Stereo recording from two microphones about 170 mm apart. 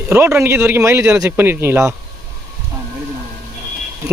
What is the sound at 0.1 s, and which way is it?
Speech, 15° right (ahead or behind).